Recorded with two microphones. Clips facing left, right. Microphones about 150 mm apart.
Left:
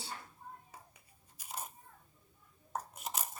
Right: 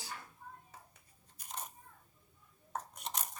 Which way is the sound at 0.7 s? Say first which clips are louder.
Left 1 dB; 10° left (ahead or behind).